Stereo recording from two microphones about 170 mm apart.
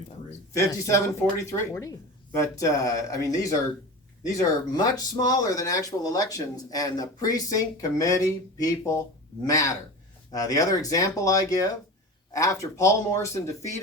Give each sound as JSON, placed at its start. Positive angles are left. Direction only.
{"t": 0.5, "sound": "a man's voice", "side_deg": 20}